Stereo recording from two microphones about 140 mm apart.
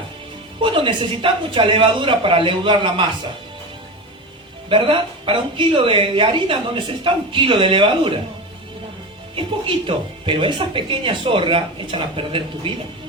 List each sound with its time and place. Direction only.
0.6 s speech: 40° right (ahead or behind)
4.7 s speech: 40° right (ahead or behind)
9.3 s speech: 40° right (ahead or behind)